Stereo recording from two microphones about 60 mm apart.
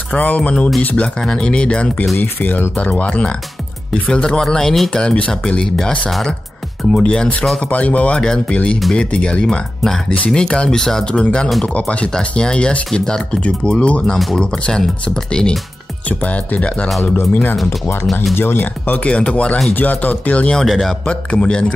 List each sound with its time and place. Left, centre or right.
0.1 s speech: left
2.1 s speech: left; by 5.0 s centre
5.0 s speech: centre
14.1 s speech: centre
16.1 s speech: left
18.3 s speech: left
19.0 s speech: centre
20.6 s speech: centre
21.0 s speech: centre